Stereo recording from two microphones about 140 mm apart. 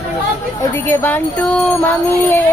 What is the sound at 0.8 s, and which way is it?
Music, 15° left (ahead or behind).